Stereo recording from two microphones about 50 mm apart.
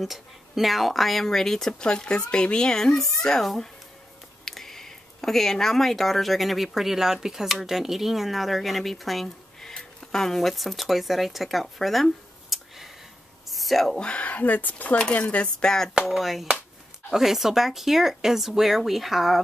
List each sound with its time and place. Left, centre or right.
0.0 s speech: centre
13.5 s a sound: centre
13.9 s speech: left
15.1 s cutlery: left
15.6 s speech: centre
16.1 s speech: centre